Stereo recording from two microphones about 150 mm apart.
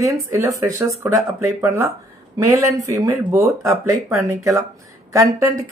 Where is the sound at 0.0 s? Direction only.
20° right (ahead or behind).